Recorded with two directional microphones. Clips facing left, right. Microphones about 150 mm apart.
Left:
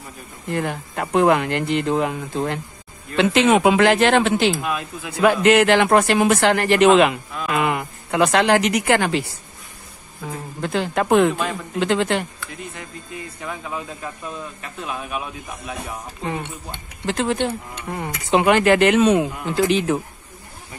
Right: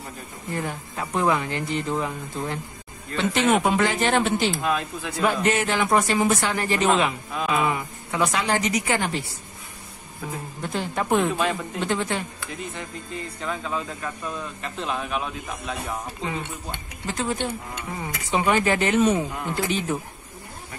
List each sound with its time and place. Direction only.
0.5 s speech: 70° left (ahead or behind)
3.2 s speech: 90° left
4.6 s speech: 10° left (ahead or behind)
5.2 s a woman's voice: 90° left
10.6 s speech: 90° left
13.4 s speech: 10° left (ahead or behind)
17.0 s speech: 75° left (ahead or behind)